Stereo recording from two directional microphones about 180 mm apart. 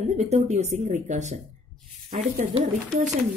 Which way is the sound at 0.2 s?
40° right (ahead or behind).